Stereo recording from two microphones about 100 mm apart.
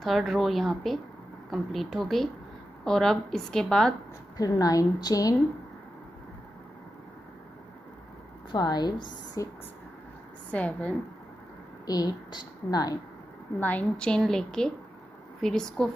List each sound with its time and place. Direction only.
0.0 s a woman's voice: centre (ahead or behind)
4.4 s a woman's voice: 40° left (ahead or behind)
8.5 s a woman's voice: 45° left (ahead or behind)
10.5 s a woman's voice: 15° left (ahead or behind)
11.8 s a woman's voice: 40° left (ahead or behind)
13.6 s a woman's voice: 15° left (ahead or behind)